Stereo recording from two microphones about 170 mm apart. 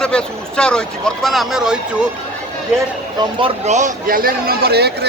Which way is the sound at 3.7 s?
45° right (ahead or behind).